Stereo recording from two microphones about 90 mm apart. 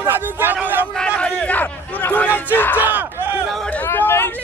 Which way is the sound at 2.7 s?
20° right (ahead or behind).